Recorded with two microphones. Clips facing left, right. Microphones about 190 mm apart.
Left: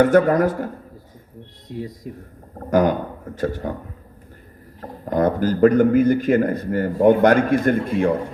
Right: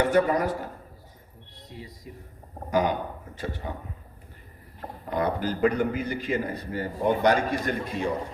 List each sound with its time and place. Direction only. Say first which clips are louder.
0.0 s a man's voice: left 7 dB; 50° left (ahead or behind)
1.7 s a man's voice: left 12 dB; 50° left (ahead or behind)
4.8 s a man's voice: left 8 dB; 45° left (ahead or behind)